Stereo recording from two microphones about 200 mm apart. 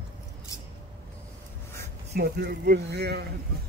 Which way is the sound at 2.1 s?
55° right (ahead or behind).